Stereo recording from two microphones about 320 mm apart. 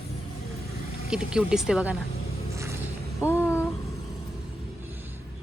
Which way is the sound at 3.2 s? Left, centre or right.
Centre.